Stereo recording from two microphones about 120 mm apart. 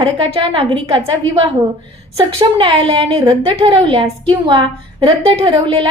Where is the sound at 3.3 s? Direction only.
45° right (ahead or behind).